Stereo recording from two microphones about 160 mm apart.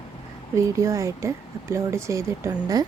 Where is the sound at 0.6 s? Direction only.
20° right (ahead or behind).